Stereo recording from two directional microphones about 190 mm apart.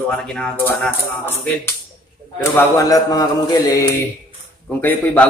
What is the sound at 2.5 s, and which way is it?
Mantra, 15° left (ahead or behind).